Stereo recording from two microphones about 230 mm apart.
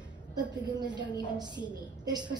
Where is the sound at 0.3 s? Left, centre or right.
Centre.